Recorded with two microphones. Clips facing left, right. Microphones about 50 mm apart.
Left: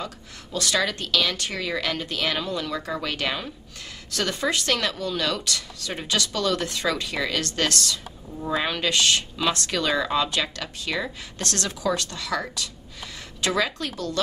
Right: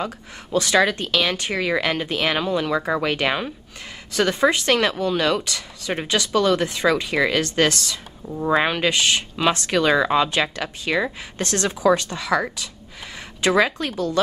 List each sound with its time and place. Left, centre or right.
0.0 s speech: right
8.4 s speech: right